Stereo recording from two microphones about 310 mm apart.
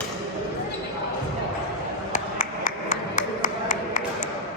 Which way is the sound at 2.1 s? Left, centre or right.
Left.